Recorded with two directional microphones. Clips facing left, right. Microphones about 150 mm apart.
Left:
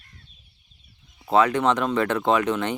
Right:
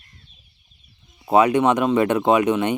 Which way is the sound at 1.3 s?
15° right (ahead or behind).